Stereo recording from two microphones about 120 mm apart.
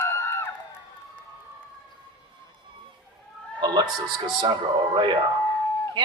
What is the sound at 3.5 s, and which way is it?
A woman's voice, 40° right (ahead or behind).